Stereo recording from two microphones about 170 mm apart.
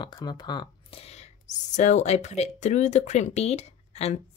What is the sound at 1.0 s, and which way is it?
Whispering, 40° left (ahead or behind).